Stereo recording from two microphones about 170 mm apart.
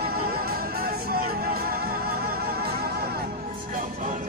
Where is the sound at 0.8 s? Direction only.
60° right (ahead or behind).